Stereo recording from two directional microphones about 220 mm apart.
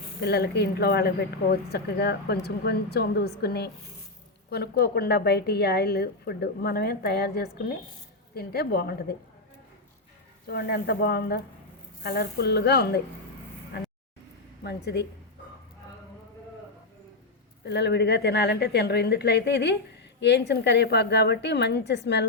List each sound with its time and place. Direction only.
0.2 s a woman's voice: 45° left (ahead or behind)
10.4 s a woman's voice: 45° left (ahead or behind)
14.6 s a woman's voice: 50° left (ahead or behind)
17.7 s a woman's voice: 50° left (ahead or behind)